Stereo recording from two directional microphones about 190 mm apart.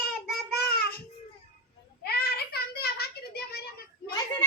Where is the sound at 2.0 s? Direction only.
55° left (ahead or behind).